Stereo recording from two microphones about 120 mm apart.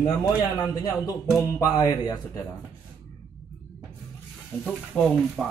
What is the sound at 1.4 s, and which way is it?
Speech, 30° left (ahead or behind).